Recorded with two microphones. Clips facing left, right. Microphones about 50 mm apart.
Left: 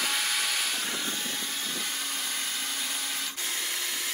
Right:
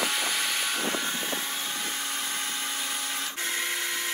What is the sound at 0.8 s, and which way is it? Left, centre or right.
Vehicle, centre.